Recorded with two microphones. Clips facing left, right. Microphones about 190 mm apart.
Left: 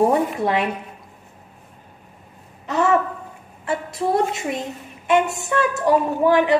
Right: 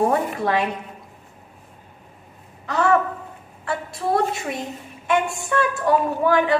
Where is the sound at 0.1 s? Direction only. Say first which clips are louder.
Left 2 dB; 20° left (ahead or behind).